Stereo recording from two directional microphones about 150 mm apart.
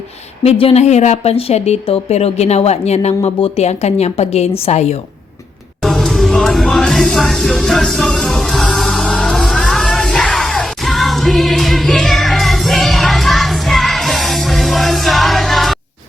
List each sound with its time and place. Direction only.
0.4 s speech: 40° left (ahead or behind)
5.8 s music: centre (ahead or behind)